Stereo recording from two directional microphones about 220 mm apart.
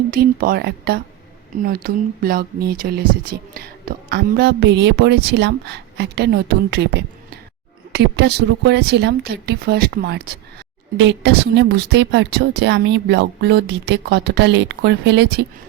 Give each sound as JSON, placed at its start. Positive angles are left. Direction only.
{"t": 0.1, "sound": "speech", "side_deg": -40}